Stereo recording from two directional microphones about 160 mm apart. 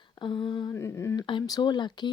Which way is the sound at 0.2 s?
30° left (ahead or behind).